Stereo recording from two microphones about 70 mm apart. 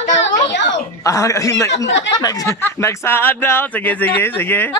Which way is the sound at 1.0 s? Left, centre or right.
Left.